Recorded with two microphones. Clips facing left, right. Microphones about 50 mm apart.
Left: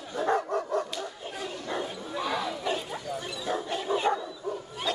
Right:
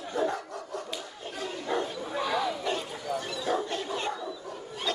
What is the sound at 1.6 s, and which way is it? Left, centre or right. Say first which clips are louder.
Bow-wow: right 4 dB; centre.